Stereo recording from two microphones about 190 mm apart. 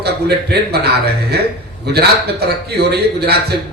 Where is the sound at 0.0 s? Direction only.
60° right (ahead or behind).